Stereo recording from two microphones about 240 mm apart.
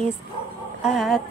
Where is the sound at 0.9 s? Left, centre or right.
Centre.